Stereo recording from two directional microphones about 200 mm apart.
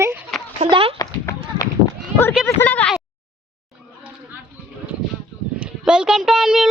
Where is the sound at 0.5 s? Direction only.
30° right (ahead or behind).